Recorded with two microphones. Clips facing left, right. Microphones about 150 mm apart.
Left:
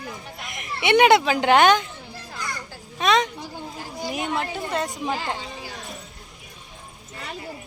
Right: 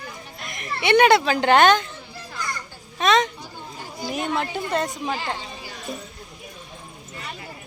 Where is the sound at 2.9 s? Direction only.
10° left (ahead or behind).